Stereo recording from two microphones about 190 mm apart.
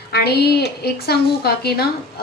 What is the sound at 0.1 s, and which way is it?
A woman's voice, 55° left (ahead or behind).